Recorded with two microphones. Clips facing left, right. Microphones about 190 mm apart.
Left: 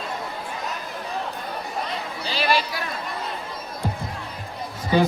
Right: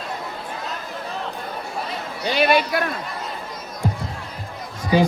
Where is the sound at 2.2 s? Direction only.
55° right (ahead or behind).